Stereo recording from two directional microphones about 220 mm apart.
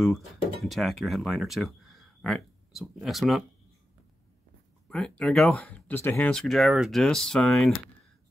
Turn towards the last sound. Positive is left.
turn(degrees=0)  # may be behind; listen again after turning